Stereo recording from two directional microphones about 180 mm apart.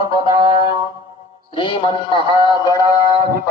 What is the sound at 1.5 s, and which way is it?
A man's voice, 30° left (ahead or behind).